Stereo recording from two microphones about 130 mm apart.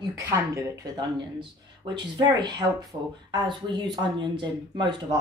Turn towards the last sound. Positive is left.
turn(degrees=-35)  # may be behind; listen again after turning